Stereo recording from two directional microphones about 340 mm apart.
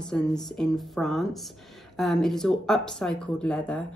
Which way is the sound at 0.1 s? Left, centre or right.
Centre.